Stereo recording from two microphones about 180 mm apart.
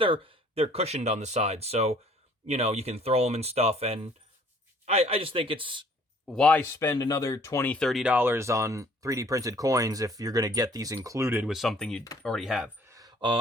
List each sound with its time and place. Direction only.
0.0 s speech: 30° right (ahead or behind)
6.2 s speech: 5° left (ahead or behind); by 11.5 s 10° right (ahead or behind)
11.5 s speech: centre (ahead or behind)
12.9 s a sound: 20° right (ahead or behind)